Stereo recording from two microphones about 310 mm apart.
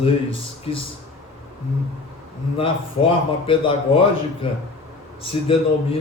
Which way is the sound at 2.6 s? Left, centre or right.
Centre.